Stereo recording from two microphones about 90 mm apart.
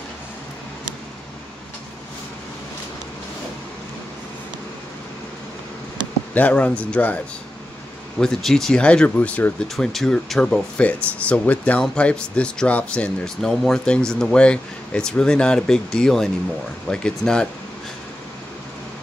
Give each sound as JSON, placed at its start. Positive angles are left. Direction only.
{"t": 6.3, "sound": "speech", "side_deg": 15}
{"t": 8.2, "sound": "speech", "side_deg": 5}
{"t": 9.8, "sound": "speech", "side_deg": 5}